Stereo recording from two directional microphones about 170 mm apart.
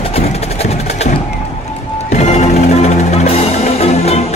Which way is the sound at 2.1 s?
40° left (ahead or behind).